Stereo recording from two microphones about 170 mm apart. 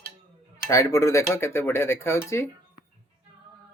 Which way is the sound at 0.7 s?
20° left (ahead or behind).